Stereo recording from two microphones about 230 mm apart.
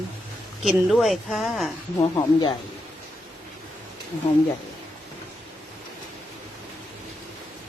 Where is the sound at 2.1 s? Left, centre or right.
Centre.